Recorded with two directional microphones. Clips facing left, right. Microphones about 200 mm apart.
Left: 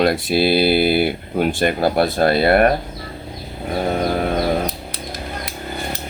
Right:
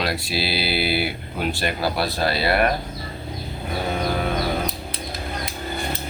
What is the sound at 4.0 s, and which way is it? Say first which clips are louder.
Music: left 4 dB; 45° left (ahead or behind).